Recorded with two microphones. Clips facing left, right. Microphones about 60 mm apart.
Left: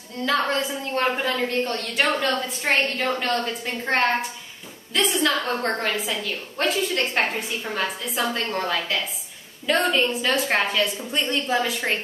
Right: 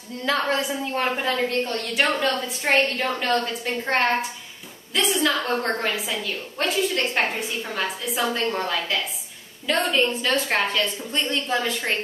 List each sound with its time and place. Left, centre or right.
0.5 s a woman's voice: centre